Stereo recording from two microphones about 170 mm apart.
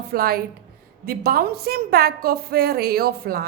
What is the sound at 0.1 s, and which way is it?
A woman's voice, 60° right (ahead or behind).